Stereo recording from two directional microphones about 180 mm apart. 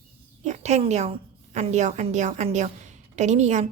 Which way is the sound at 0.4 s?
40° right (ahead or behind).